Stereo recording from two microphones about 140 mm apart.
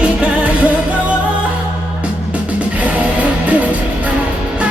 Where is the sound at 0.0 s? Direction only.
10° right (ahead or behind).